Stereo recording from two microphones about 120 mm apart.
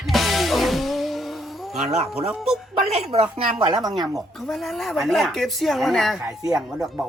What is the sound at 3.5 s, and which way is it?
Chopping, 35° right (ahead or behind).